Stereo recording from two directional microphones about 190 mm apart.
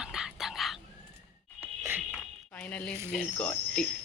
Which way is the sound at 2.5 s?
5° left (ahead or behind).